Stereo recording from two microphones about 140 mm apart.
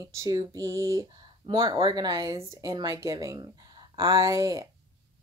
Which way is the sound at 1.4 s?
40° right (ahead or behind).